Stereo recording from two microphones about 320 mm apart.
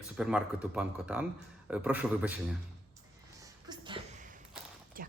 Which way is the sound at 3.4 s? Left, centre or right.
Centre.